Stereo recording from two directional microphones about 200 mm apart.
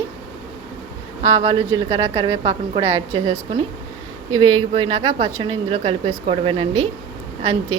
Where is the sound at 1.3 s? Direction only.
30° right (ahead or behind).